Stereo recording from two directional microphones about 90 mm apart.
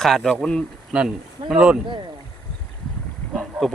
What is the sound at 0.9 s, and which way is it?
Speech, 5° right (ahead or behind).